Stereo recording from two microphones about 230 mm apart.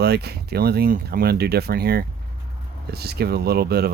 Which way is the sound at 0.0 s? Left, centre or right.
Right.